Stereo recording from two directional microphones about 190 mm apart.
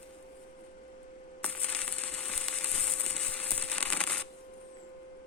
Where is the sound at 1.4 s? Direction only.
10° left (ahead or behind).